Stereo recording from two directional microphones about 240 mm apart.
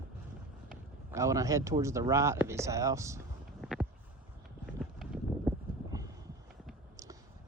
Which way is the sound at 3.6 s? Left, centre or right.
Centre.